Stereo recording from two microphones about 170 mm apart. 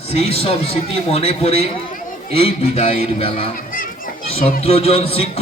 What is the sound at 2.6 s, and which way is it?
Speech, 35° left (ahead or behind).